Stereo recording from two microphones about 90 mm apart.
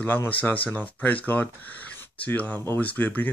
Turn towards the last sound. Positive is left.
turn(degrees=20)  # may be behind; listen again after turning